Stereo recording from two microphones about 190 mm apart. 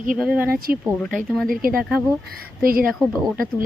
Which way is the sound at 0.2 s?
5° right (ahead or behind).